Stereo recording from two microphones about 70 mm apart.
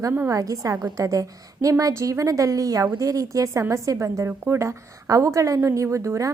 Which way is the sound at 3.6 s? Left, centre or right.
Right.